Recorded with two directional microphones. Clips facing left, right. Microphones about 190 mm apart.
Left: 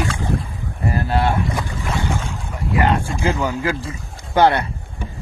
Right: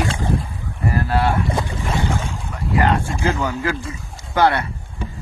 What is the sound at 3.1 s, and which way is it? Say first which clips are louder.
Speech: left 1 dB; 15° left (ahead or behind).